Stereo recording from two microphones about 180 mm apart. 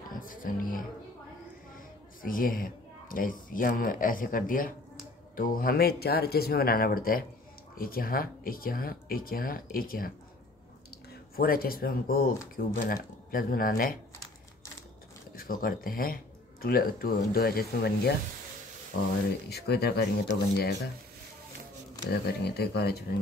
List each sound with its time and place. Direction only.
0.1 s music: 50° left (ahead or behind)
2.2 s speech: 50° left (ahead or behind)
11.3 s speech: 55° left (ahead or behind)
15.3 s speech: 55° left (ahead or behind)
22.1 s speech: 65° left (ahead or behind)